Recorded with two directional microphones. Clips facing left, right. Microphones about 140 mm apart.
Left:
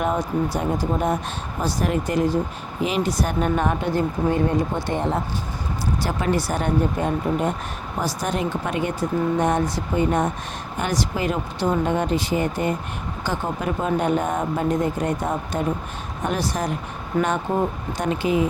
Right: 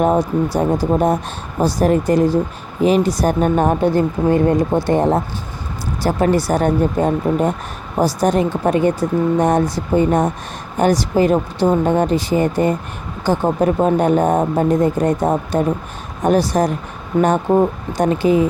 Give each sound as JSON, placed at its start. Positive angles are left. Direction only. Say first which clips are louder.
{"t": 0.0, "sound": "speech", "louder": "right 7 dB", "side_deg": -35}